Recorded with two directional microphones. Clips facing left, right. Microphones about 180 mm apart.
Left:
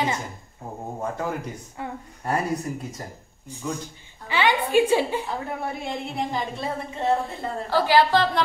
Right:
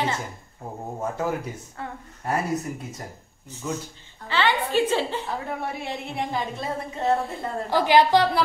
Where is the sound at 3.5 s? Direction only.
15° left (ahead or behind).